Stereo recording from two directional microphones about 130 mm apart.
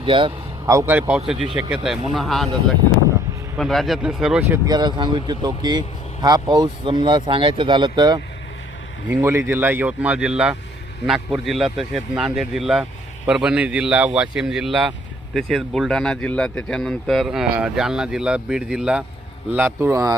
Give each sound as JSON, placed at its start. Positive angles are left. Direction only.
{"t": 0.0, "sound": "speech", "side_deg": -40}
{"t": 0.7, "sound": "speech", "side_deg": -25}
{"t": 0.9, "sound": "a man's voice", "side_deg": -10}
{"t": 3.6, "sound": "a man's voice", "side_deg": 0}
{"t": 4.4, "sound": "speech", "side_deg": -20}
{"t": 4.7, "sound": "speech", "side_deg": -35}
{"t": 9.0, "sound": "a man's voice", "side_deg": -15}